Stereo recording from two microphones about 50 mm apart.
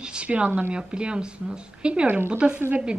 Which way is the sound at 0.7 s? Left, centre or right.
Centre.